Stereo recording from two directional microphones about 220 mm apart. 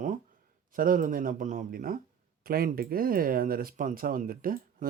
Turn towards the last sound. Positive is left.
turn(degrees=-40)  # may be behind; listen again after turning